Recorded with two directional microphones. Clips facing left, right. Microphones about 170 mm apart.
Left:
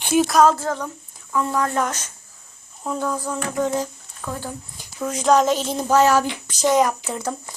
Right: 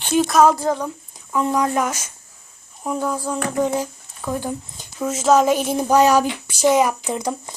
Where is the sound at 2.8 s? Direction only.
10° right (ahead or behind).